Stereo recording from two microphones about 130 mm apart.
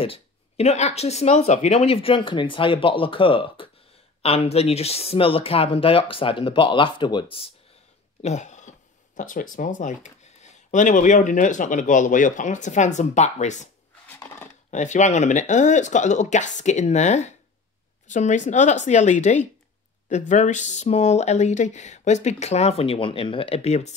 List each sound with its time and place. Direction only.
0.0 s speech: 50° left (ahead or behind)
8.2 s speech: 60° left (ahead or behind)
14.2 s a sound: 10° left (ahead or behind)
14.7 s speech: 65° left (ahead or behind)